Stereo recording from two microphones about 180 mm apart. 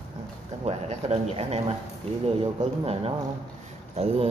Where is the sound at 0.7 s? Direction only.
35° right (ahead or behind).